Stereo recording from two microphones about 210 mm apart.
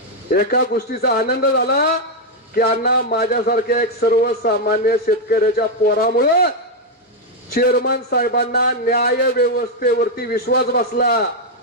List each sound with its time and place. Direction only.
0.3 s a man's voice: 45° left (ahead or behind)
7.5 s a man's voice: 45° left (ahead or behind)